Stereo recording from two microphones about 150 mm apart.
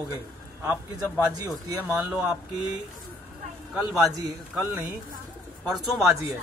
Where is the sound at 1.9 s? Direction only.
10° right (ahead or behind).